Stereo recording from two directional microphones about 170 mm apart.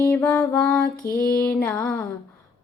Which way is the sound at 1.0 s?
60° left (ahead or behind).